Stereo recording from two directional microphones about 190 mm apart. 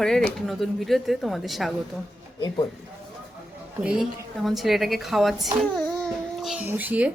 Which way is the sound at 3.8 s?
5° right (ahead or behind).